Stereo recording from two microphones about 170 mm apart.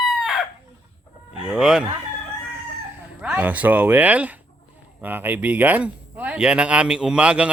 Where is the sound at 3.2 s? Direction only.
10° right (ahead or behind).